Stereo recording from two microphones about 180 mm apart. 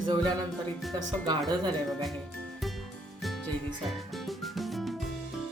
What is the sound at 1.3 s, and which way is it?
Speech, 25° right (ahead or behind).